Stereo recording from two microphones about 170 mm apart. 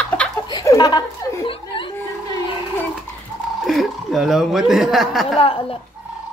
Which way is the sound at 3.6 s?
Centre (ahead or behind).